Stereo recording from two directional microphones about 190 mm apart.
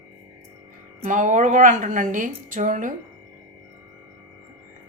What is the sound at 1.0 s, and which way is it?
A woman's voice, 40° right (ahead or behind).